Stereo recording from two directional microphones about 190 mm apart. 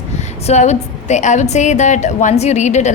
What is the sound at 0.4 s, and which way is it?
A woman's voice, 35° left (ahead or behind).